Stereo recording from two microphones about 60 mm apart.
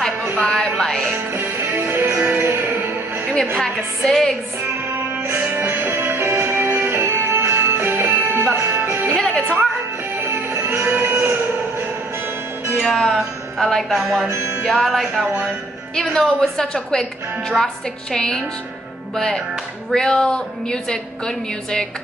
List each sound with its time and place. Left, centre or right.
0.4 s music: centre
1.9 s music: right
3.5 s a woman's voice: centre
5.2 s music: right
9.1 s music: centre
10.5 s music: right
12.8 s a woman's voice: centre
13.9 s music: centre
14.3 s music: right
14.6 s music: centre
15.2 s a woman's voice: right
15.9 s a woman's voice: centre